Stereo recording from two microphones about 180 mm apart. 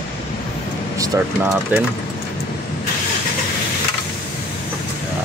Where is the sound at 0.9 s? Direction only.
20° right (ahead or behind).